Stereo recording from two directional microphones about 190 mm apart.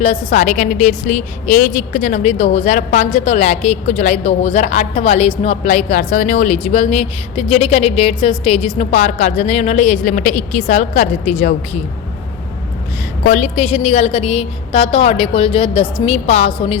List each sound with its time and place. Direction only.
0.0 s a woman's voice: 35° left (ahead or behind)
13.2 s a woman's voice: 40° left (ahead or behind)